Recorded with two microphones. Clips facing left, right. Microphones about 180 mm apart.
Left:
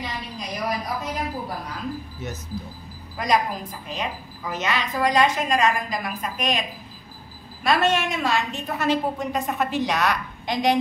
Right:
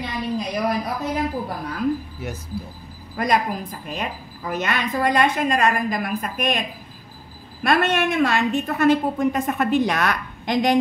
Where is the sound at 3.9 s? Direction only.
50° right (ahead or behind).